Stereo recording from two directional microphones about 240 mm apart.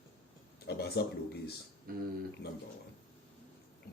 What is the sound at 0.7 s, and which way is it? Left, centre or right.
Speech, left.